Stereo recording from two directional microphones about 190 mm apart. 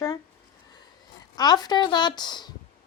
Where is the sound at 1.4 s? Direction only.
20° left (ahead or behind).